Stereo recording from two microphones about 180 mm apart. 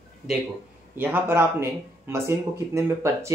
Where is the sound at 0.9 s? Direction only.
10° right (ahead or behind).